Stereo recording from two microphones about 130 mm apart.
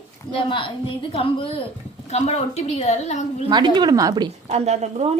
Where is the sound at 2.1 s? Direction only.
60° left (ahead or behind).